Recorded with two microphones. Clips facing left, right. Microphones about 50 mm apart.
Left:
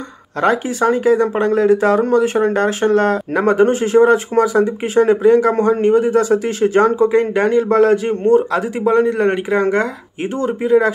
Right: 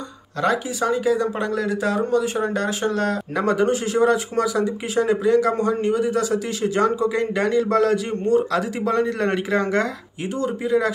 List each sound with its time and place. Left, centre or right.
0.4 s speech: left; by 9.8 s centre
10.3 s speech: left